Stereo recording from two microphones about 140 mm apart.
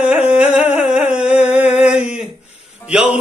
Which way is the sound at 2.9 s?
10° right (ahead or behind).